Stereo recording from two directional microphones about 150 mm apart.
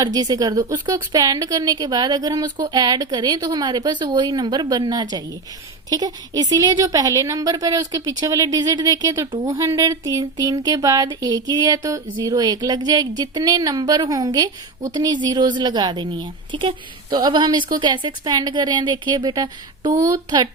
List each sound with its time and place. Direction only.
0.0 s speech: 25° right (ahead or behind)